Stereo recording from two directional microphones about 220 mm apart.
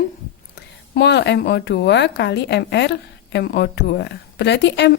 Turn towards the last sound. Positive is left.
turn(degrees=50)  # may be behind; listen again after turning